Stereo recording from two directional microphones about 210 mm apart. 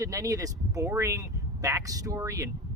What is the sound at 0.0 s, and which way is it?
Speech, 15° right (ahead or behind).